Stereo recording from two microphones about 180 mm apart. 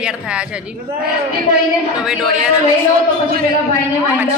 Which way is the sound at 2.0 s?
5° right (ahead or behind).